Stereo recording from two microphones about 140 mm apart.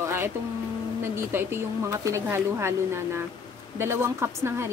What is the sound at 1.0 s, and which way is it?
A woman's voice, 15° right (ahead or behind).